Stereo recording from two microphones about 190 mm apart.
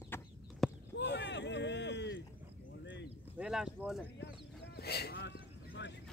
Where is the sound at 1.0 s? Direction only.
65° left (ahead or behind).